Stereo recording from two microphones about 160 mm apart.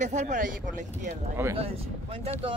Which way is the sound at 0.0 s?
50° right (ahead or behind).